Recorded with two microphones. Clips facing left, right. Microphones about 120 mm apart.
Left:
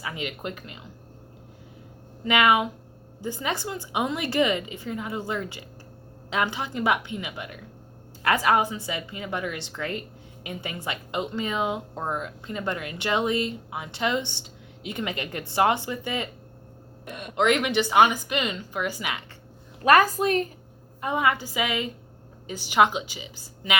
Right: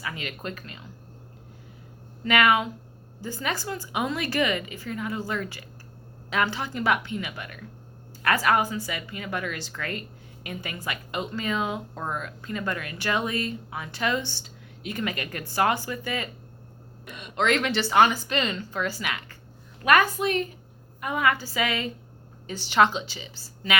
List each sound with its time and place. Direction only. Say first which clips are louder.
0.0 s a woman's voice: left 2 dB; 20° left (ahead or behind)
2.2 s a woman's voice: left 1 dB; 20° left (ahead or behind)
17.1 s speech: left 5 dB; 55° left (ahead or behind)
17.3 s speech: left 2 dB; 15° left (ahead or behind)
19.8 s a woman's voice: left 2 dB; 35° left (ahead or behind)
21.0 s a woman's voice: left 1 dB; 25° left (ahead or behind)